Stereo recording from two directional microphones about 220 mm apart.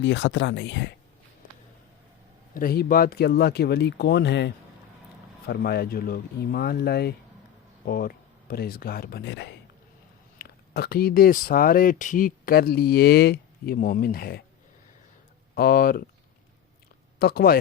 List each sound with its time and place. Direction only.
0.0 s speech: 55° left (ahead or behind)
2.6 s speech: 40° left (ahead or behind)
15.5 s speech: 45° left (ahead or behind)
17.2 s speech: 45° left (ahead or behind)